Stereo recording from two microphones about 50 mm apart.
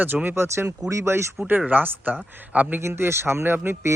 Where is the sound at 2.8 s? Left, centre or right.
Right.